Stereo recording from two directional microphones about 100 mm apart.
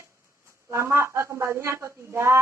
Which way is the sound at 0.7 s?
25° right (ahead or behind).